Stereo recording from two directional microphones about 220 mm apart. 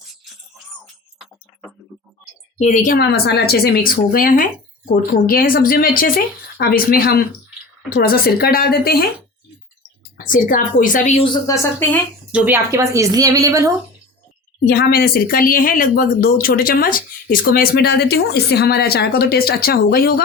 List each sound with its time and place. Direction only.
2.6 s speech: 35° left (ahead or behind)
10.2 s speech: 35° left (ahead or behind)
11.4 s speech: 10° left (ahead or behind)
12.3 s speech: 10° right (ahead or behind)
14.7 s speech: 45° left (ahead or behind)